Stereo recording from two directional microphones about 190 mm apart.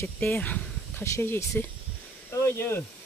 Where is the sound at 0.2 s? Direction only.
10° left (ahead or behind).